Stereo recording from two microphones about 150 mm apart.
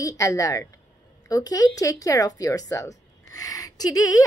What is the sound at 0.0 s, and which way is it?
Speech, 20° left (ahead or behind).